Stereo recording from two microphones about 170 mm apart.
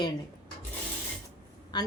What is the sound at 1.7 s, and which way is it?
Speech, 25° left (ahead or behind).